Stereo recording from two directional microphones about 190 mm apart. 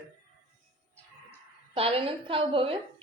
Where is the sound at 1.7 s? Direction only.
30° right (ahead or behind).